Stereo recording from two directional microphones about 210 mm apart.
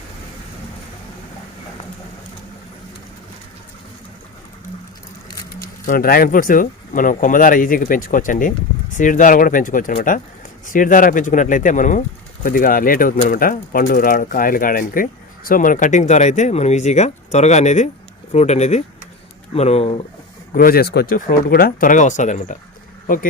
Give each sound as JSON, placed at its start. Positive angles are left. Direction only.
{"t": 5.8, "sound": "speech", "side_deg": 40}
{"t": 20.5, "sound": "speech", "side_deg": 45}